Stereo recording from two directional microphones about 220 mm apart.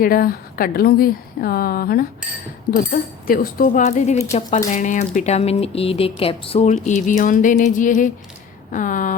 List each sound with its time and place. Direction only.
0.0 s speech: 40° left (ahead or behind)
3.2 s speech: 40° left (ahead or behind)